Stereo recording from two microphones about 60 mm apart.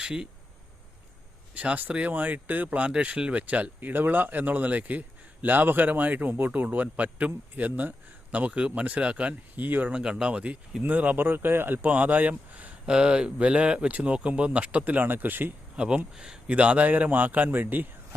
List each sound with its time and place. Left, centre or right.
0.0 s speech: centre
1.5 s speech: right
9.9 s speech: centre; by 15.5 s right
15.7 s speech: centre
16.5 s speech: right